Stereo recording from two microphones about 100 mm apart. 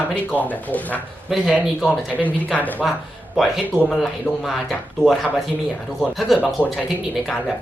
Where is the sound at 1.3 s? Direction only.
5° right (ahead or behind).